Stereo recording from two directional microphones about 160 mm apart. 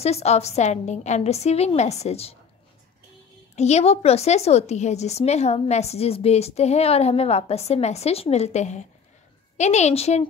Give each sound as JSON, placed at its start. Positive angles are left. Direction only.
{"t": 0.0, "sound": "a woman's voice", "side_deg": 40}
{"t": 3.5, "sound": "a woman's voice", "side_deg": 45}